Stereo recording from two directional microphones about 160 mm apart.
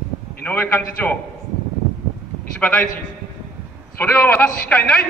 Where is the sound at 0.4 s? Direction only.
10° left (ahead or behind).